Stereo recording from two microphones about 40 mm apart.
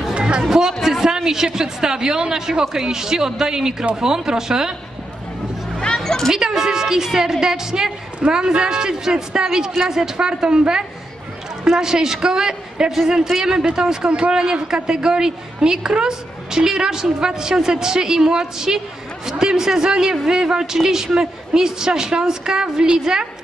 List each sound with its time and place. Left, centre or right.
0.1 s a sound: right
0.4 s a woman's voice: centre
5.8 s music: centre
6.3 s a woman's voice: centre